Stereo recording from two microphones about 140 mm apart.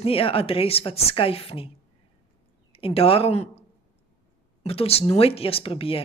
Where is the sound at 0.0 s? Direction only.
40° left (ahead or behind).